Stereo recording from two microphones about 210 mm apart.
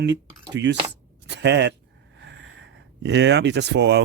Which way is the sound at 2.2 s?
55° right (ahead or behind).